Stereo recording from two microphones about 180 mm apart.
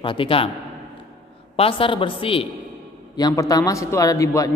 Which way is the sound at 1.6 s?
30° left (ahead or behind).